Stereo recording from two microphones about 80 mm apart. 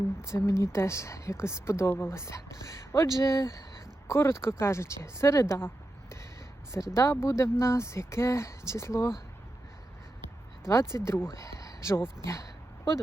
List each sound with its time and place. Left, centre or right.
0.2 s a woman's voice: left
10.7 s a woman's voice: left